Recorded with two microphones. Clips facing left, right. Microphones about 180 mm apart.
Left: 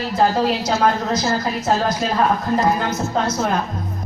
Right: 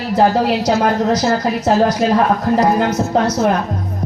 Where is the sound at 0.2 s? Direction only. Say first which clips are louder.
Right 4 dB; 70° right (ahead or behind).